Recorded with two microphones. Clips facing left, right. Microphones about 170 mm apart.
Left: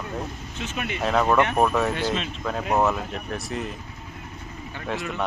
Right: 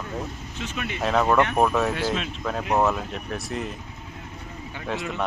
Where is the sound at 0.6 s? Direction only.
20° left (ahead or behind).